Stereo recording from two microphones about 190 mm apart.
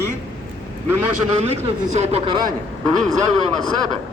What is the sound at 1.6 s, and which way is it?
Speech, 35° right (ahead or behind).